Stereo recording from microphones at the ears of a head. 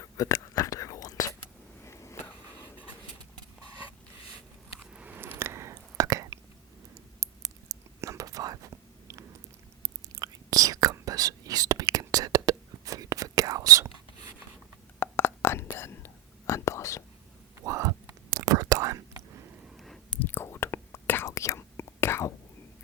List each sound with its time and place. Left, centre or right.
0.0 s whispering: left
5.1 s a sound: right
7.2 s whispering: right
14.9 s whispering: left
17.6 s whispering: right
20.1 s whispering: left